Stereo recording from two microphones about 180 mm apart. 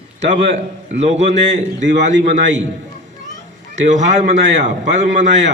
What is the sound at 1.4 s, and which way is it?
Speech, 90° right.